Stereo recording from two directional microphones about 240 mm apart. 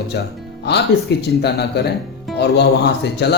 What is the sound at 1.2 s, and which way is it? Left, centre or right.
Speech, left.